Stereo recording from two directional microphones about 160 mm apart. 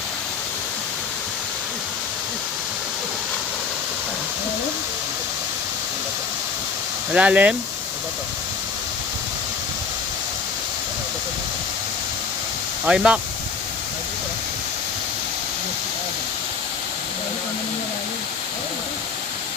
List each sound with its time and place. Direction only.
7.1 s speech: 10° right (ahead or behind)
12.8 s speech: 5° right (ahead or behind)